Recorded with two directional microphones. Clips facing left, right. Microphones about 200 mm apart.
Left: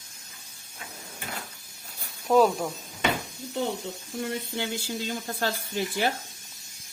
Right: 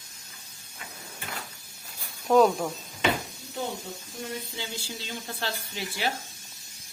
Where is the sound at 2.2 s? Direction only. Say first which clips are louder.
Right 1 dB; 5° left (ahead or behind).